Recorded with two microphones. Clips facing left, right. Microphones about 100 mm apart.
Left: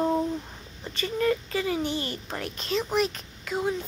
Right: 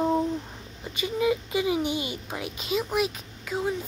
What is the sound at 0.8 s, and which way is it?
A child's voice, 10° right (ahead or behind).